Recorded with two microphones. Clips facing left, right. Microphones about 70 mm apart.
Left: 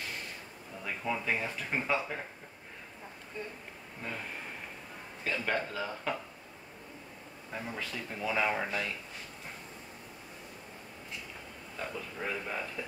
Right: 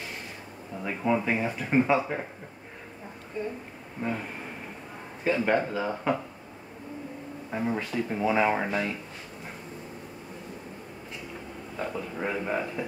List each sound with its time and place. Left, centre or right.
0.8 s speech: right
4.0 s speech: right
5.2 s speech: right
7.5 s speech: right
11.7 s speech: right